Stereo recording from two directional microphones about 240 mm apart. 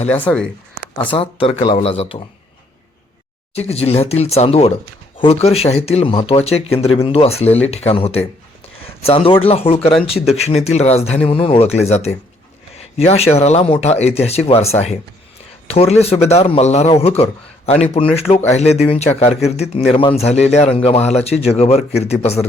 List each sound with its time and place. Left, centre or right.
0.1 s speech: centre
1.1 s a man's voice: left
3.5 s a man's voice: left